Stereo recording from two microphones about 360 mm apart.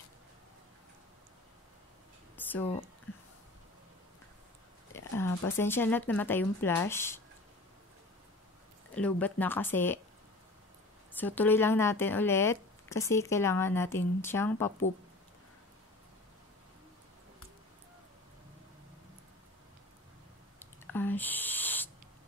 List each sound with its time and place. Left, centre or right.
2.3 s a sound: centre
4.9 s speech: centre
8.9 s speech: centre
11.1 s speech: centre
20.5 s spray: centre